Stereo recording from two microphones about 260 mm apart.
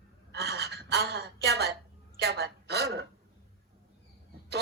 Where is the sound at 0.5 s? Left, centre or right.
Right.